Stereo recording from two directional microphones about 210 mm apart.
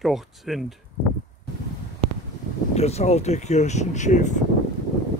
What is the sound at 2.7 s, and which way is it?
Speech, 30° left (ahead or behind).